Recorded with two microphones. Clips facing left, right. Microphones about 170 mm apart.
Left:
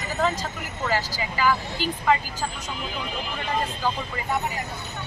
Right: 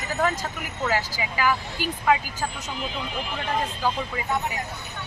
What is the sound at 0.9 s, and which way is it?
Speech, 10° right (ahead or behind).